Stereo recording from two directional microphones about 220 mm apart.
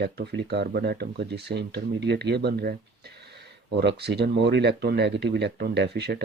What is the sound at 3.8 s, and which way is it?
Speech, 50° right (ahead or behind).